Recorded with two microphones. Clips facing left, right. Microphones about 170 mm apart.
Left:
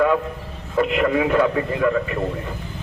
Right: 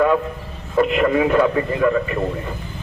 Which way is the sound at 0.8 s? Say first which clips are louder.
Right 2 dB; 45° right (ahead or behind).